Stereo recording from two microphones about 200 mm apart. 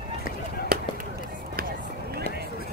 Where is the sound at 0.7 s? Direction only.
50° right (ahead or behind).